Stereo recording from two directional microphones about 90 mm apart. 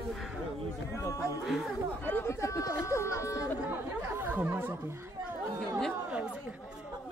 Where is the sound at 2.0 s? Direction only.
25° left (ahead or behind).